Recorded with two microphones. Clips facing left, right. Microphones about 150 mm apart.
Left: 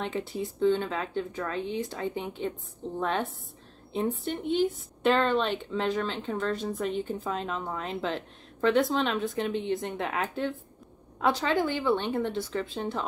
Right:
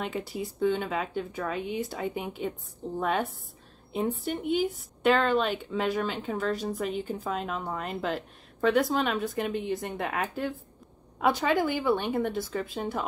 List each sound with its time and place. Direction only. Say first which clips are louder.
0.3 s speech: left 3 dB; 5° right (ahead or behind)